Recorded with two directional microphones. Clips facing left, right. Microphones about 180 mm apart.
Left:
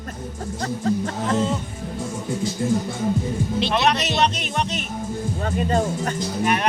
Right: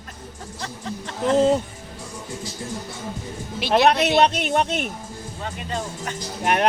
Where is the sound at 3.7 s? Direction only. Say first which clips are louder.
Right 8 dB; 55° right (ahead or behind).